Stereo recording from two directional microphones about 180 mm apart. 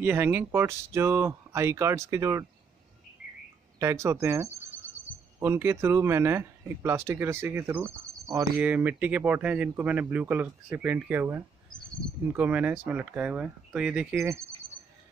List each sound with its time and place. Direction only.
0.0 s speech: 10° right (ahead or behind)
3.8 s speech: 15° right (ahead or behind)
14.1 s speech: 15° right (ahead or behind)